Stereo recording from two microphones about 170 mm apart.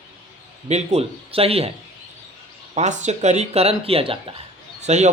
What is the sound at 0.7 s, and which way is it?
Speech, 40° right (ahead or behind).